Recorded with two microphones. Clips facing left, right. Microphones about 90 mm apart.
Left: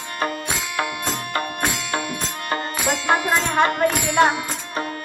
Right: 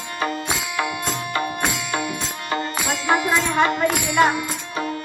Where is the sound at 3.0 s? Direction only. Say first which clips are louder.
Right 1 dB; 50° left (ahead or behind).